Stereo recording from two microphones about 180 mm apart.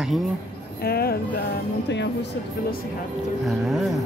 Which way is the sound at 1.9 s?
75° left (ahead or behind).